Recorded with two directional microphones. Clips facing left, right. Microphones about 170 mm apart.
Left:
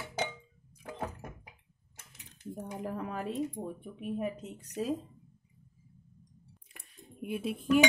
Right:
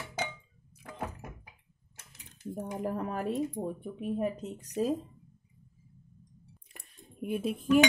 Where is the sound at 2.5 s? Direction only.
45° right (ahead or behind).